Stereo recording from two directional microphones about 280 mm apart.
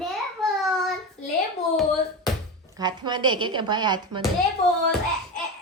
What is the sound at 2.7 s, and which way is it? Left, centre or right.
A woman's voice, centre.